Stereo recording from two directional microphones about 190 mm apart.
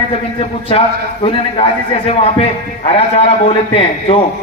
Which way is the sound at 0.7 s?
30° left (ahead or behind).